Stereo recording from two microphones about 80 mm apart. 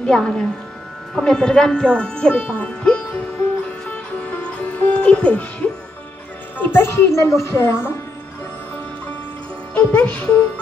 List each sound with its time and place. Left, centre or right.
0.0 s speech: centre
3.8 s music: centre
6.6 s speech: left
9.8 s speech: centre